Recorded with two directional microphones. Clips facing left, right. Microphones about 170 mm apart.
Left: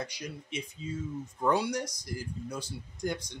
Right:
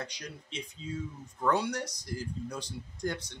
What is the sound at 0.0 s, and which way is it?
Speech, 10° left (ahead or behind).